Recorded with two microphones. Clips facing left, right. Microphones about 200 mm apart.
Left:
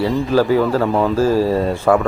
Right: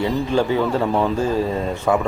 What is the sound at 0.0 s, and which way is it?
Speech, centre (ahead or behind).